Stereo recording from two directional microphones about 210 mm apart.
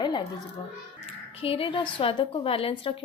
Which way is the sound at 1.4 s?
25° left (ahead or behind).